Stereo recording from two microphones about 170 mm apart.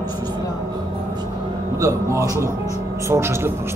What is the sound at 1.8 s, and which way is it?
Speech, 20° right (ahead or behind).